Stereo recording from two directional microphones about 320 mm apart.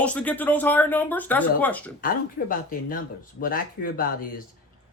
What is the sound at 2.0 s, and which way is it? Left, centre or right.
Speech, left.